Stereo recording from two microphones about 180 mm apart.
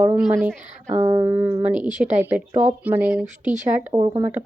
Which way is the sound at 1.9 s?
40° right (ahead or behind).